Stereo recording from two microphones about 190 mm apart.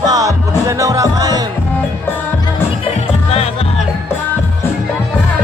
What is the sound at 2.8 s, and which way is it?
Music, 30° left (ahead or behind).